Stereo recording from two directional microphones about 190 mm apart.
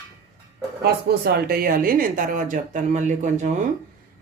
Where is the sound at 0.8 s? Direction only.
55° right (ahead or behind).